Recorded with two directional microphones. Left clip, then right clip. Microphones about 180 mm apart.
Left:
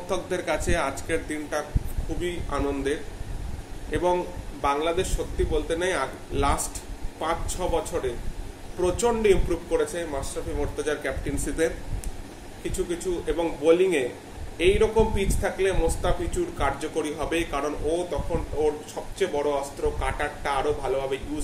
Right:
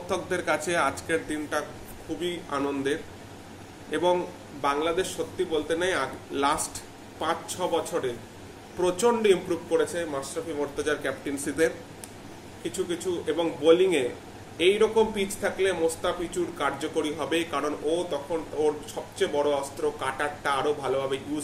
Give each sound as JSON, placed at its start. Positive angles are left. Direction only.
{"t": 0.1, "sound": "speech", "side_deg": -10}
{"t": 12.7, "sound": "speech", "side_deg": -10}